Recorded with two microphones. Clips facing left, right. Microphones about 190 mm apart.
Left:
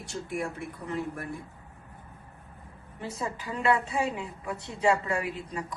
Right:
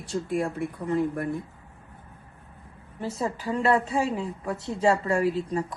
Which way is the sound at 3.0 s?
35° right (ahead or behind).